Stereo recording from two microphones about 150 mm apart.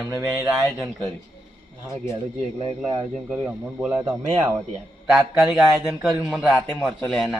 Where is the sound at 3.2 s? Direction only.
5° right (ahead or behind).